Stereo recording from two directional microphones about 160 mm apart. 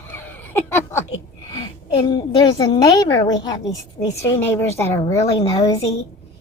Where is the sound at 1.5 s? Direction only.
25° left (ahead or behind).